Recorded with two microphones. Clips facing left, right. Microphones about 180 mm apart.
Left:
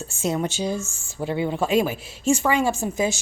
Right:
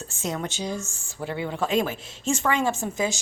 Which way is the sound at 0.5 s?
20° right (ahead or behind).